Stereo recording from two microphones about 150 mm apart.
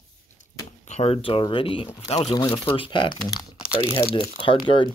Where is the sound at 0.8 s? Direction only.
50° left (ahead or behind).